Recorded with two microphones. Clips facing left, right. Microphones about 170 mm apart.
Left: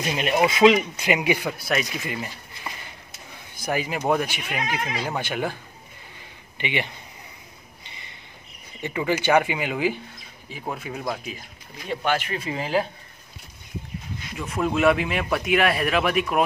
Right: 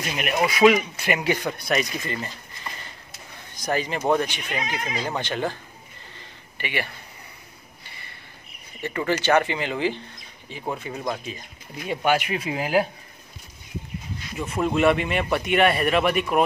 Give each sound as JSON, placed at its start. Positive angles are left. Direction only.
{"t": 0.5, "sound": "speech", "side_deg": 20}
{"t": 3.5, "sound": "speech", "side_deg": 10}
{"t": 6.1, "sound": "a sound", "side_deg": 20}
{"t": 8.8, "sound": "speech", "side_deg": 15}
{"t": 11.9, "sound": "speech", "side_deg": -10}
{"t": 14.3, "sound": "speech", "side_deg": 0}